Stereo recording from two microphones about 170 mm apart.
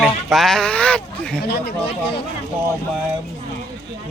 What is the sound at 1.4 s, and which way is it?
Speech, 70° left (ahead or behind).